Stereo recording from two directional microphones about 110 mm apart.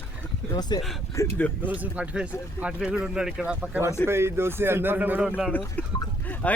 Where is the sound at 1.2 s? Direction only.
25° left (ahead or behind).